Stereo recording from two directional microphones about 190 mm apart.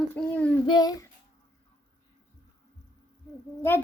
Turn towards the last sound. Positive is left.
turn(degrees=10)  # may be behind; listen again after turning